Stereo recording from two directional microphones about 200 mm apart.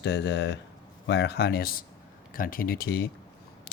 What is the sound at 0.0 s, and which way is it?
Speech, 60° left (ahead or behind).